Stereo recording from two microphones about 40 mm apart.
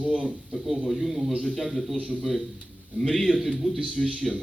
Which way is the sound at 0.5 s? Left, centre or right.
Centre.